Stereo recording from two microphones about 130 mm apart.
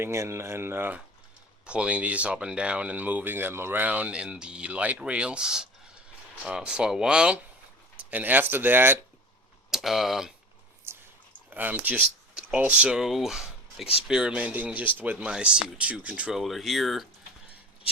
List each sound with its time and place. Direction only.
0.0 s speech: 20° right (ahead or behind)
9.7 s speech: centre (ahead or behind)
10.9 s a sound: 20° right (ahead or behind)
11.5 s speech: 15° right (ahead or behind)